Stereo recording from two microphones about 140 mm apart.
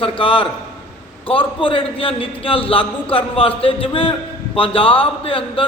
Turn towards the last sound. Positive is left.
turn(degrees=40)  # may be behind; listen again after turning